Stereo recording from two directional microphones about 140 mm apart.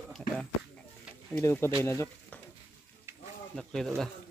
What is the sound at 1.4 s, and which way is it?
Speech, 20° left (ahead or behind).